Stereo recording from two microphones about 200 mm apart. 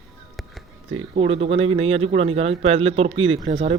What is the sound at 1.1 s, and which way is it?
Speech, 30° right (ahead or behind).